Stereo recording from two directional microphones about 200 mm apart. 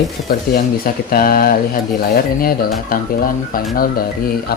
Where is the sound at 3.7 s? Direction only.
45° left (ahead or behind).